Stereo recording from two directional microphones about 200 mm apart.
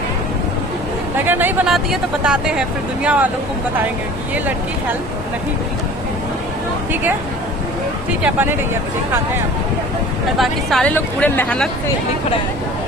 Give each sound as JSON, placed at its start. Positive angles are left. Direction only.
{"t": 1.2, "sound": "speech", "side_deg": -10}
{"t": 8.2, "sound": "speech", "side_deg": -10}
{"t": 10.3, "sound": "speech", "side_deg": 0}